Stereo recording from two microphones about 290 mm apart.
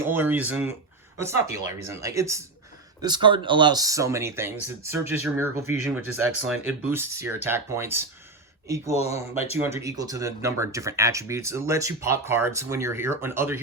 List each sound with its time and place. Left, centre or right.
0.0 s speech: centre
9.0 s speech: left
9.6 s speech: centre